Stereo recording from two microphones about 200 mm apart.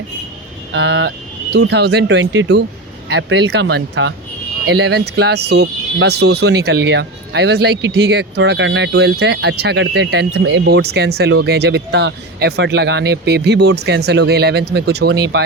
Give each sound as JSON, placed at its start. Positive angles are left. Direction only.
{"t": 0.7, "sound": "speech", "side_deg": -65}